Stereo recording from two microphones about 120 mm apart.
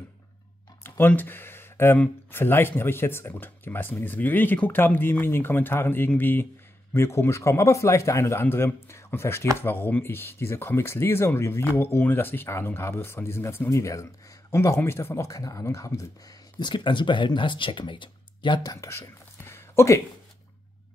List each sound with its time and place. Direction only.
0.8 s speech: 15° left (ahead or behind)